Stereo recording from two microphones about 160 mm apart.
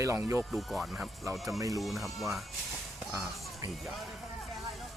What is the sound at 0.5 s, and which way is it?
Speech, centre (ahead or behind).